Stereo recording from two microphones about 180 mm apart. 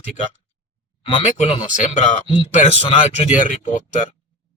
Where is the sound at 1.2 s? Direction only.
30° left (ahead or behind).